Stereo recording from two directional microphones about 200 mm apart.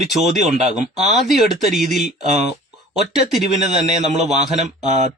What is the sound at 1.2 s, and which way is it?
Speech, centre (ahead or behind).